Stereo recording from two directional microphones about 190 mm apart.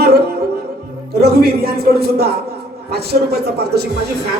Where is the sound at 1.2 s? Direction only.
55° right (ahead or behind).